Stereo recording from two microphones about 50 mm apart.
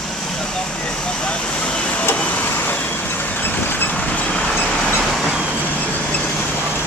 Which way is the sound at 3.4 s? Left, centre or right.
Left.